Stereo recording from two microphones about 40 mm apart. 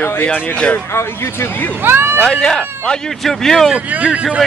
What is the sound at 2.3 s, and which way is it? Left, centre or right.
Speech, centre.